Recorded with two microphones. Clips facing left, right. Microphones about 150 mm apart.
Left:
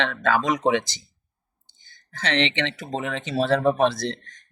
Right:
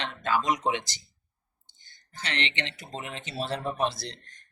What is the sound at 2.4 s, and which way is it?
Speech, 90° left.